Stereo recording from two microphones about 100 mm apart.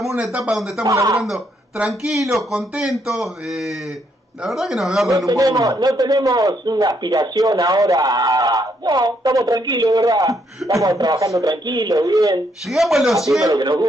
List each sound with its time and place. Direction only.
0.0 s speech: 5° right (ahead or behind)
0.8 s a man's voice: 30° right (ahead or behind)
1.9 s speech: 5° right (ahead or behind)
5.1 s a man's voice: 35° right (ahead or behind)
11.5 s a man's voice: 45° right (ahead or behind)
12.6 s speech: centre (ahead or behind)
13.4 s a man's voice: 40° right (ahead or behind)